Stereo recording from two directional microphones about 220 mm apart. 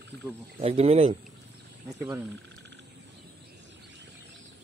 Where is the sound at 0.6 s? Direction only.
25° right (ahead or behind).